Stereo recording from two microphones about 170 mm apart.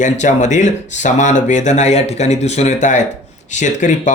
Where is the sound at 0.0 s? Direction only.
45° left (ahead or behind).